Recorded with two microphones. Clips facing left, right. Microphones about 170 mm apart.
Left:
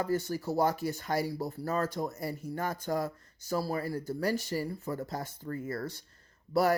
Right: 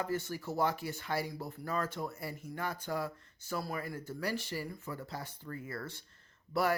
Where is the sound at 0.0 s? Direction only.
40° left (ahead or behind).